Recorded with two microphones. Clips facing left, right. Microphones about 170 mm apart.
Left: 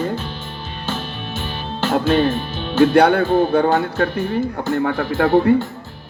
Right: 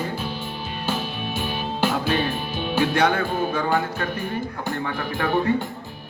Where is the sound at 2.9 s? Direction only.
60° left (ahead or behind).